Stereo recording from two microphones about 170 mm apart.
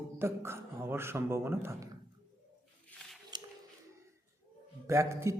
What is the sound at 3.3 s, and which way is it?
Music, 25° right (ahead or behind).